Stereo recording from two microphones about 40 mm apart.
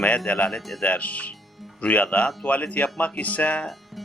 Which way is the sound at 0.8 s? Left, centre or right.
Left.